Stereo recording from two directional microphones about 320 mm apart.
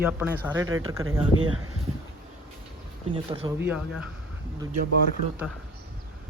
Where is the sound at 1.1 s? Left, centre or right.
Right.